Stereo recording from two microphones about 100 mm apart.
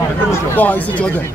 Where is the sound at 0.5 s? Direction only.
20° left (ahead or behind).